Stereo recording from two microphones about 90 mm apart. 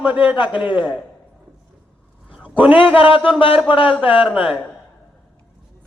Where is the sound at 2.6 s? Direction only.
80° left.